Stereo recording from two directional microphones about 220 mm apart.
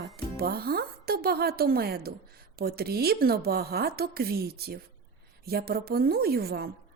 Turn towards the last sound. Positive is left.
turn(degrees=-45)  # may be behind; listen again after turning